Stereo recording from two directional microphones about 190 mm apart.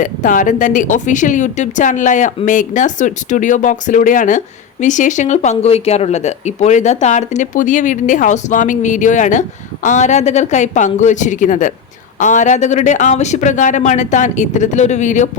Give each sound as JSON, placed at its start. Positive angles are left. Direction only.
{"t": 0.0, "sound": "speech", "side_deg": 45}